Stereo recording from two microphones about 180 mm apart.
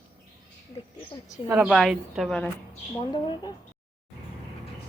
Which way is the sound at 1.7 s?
Centre (ahead or behind).